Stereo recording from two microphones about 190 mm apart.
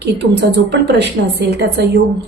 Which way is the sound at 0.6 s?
65° right (ahead or behind).